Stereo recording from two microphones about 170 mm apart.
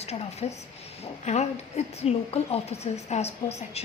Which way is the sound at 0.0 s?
40° left (ahead or behind).